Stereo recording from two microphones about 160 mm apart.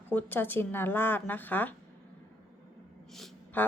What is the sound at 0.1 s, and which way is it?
Speech, 10° left (ahead or behind).